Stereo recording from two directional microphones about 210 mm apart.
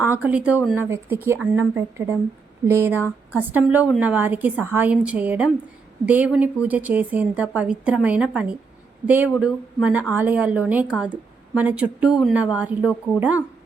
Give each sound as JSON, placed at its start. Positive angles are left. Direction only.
{"t": 0.0, "sound": "speech", "side_deg": -5}